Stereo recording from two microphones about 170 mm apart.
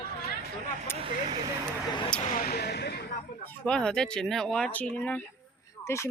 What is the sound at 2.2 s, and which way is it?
Speech, 55° left (ahead or behind).